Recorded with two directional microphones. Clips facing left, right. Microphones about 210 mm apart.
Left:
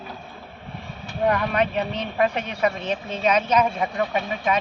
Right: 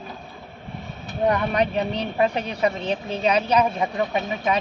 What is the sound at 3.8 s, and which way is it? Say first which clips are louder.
Speech: right 1 dB; 20° right (ahead or behind).